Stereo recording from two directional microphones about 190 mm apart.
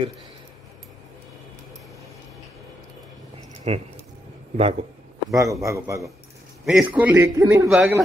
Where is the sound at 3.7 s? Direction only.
35° right (ahead or behind).